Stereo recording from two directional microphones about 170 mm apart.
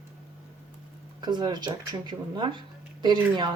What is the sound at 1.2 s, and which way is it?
Speech, 25° right (ahead or behind).